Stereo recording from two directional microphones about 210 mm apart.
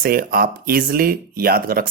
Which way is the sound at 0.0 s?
45° right (ahead or behind).